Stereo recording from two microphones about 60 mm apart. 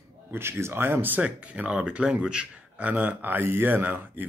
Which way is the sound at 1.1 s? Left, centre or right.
Right.